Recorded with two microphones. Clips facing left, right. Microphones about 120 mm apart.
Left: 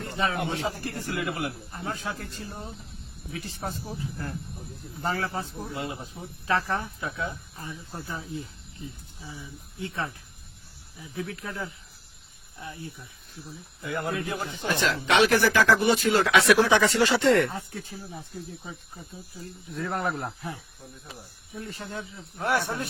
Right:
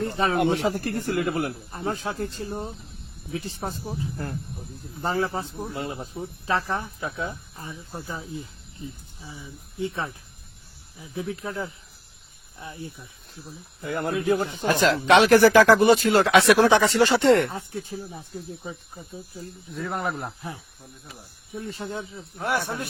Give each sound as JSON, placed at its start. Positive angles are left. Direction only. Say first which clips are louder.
{"t": 0.0, "sound": "speech", "louder": "right 4 dB", "side_deg": -35}
{"t": 0.3, "sound": "speech", "louder": "right 7 dB", "side_deg": -60}
{"t": 5.7, "sound": "speech", "louder": "right 1 dB", "side_deg": -40}
{"t": 6.4, "sound": "speech", "louder": "even", "side_deg": -20}
{"t": 7.0, "sound": "speech", "louder": "right 2 dB", "side_deg": -30}
{"t": 7.9, "sound": "speech", "louder": "right 1 dB", "side_deg": -15}
{"t": 13.8, "sound": "speech", "louder": "right 6 dB", "side_deg": -45}
{"t": 18.6, "sound": "speech", "louder": "right 4 dB", "side_deg": -20}
{"t": 19.7, "sound": "speech", "louder": "even", "side_deg": -5}
{"t": 21.5, "sound": "speech", "louder": "right 4 dB", "side_deg": -25}
{"t": 22.4, "sound": "speech", "louder": "even", "side_deg": -10}